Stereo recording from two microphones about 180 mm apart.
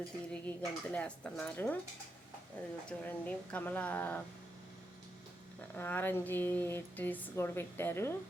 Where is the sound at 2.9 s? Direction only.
5° left (ahead or behind).